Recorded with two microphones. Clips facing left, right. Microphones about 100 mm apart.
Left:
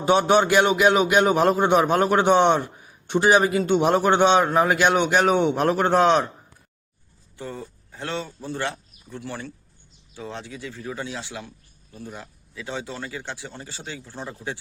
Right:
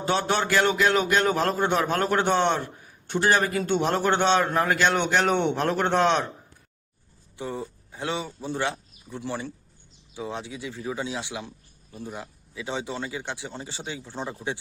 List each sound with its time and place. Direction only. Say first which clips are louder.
0.0 s a man's voice: left 7 dB; 15° left (ahead or behind)
7.3 s speech: right 2 dB; 15° right (ahead or behind)